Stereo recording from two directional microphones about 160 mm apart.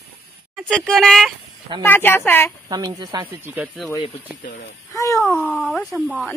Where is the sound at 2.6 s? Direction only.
25° right (ahead or behind).